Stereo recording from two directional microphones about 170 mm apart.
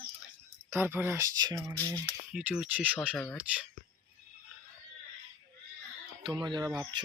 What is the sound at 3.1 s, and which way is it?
Speech, 5° left (ahead or behind).